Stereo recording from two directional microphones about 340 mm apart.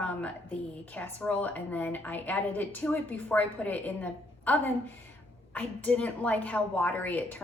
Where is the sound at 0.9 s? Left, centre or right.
Centre.